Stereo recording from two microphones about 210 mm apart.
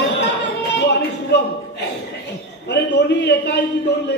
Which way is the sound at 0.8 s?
55° left (ahead or behind).